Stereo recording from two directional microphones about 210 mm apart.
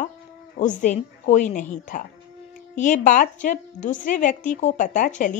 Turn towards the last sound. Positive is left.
turn(degrees=40)  # may be behind; listen again after turning